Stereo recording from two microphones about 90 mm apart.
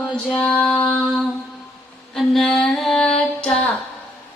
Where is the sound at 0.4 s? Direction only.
10° left (ahead or behind).